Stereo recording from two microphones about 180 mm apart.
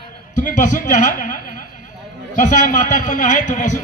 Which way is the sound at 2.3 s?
45° left (ahead or behind).